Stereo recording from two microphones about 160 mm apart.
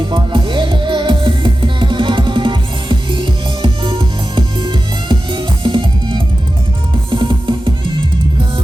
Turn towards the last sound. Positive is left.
turn(degrees=-30)  # may be behind; listen again after turning